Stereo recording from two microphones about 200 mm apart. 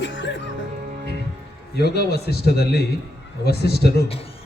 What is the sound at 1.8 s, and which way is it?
A man's voice, 55° left (ahead or behind).